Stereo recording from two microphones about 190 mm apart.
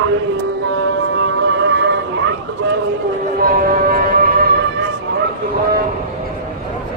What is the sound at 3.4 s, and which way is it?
Music, 50° right (ahead or behind).